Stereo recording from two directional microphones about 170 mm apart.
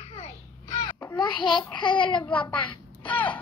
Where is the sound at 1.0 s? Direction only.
15° left (ahead or behind).